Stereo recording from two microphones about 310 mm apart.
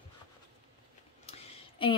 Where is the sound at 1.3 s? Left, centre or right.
Centre.